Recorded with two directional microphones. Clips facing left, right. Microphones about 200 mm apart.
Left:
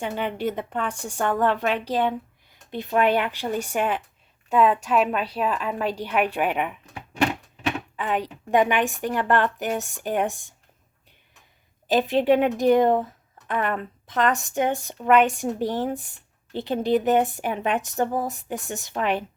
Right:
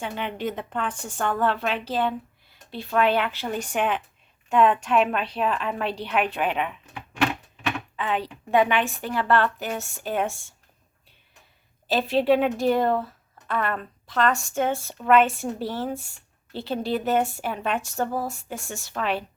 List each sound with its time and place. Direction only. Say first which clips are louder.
0.0 s speech: left 3 dB; 10° left (ahead or behind)
7.9 s speech: left 1 dB; 10° left (ahead or behind)
11.9 s speech: left 1 dB; 15° left (ahead or behind)